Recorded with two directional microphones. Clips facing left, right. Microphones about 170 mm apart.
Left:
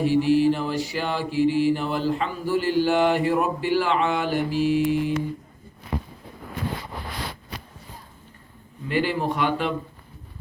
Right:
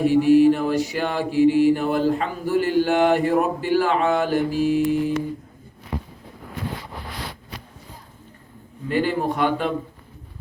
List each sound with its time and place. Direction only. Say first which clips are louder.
0.0 s mantra: right 4 dB; 50° right (ahead or behind)
8.9 s mantra: right 2 dB; 45° right (ahead or behind)